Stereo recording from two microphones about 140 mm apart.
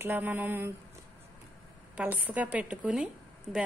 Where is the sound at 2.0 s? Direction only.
10° right (ahead or behind).